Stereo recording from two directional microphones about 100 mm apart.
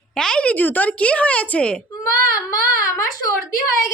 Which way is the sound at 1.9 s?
30° left (ahead or behind).